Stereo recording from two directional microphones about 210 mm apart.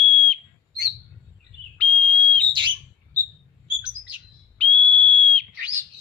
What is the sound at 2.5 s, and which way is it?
Bird, 25° right (ahead or behind).